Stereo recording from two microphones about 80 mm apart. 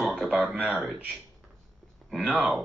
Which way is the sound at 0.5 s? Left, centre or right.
Centre.